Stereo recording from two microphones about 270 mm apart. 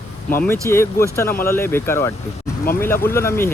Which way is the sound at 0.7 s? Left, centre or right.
Centre.